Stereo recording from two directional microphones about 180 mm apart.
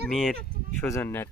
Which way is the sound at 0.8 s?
10° left (ahead or behind).